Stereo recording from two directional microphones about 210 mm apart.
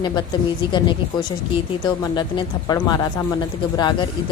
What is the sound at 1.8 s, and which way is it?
A woman's voice, 20° left (ahead or behind).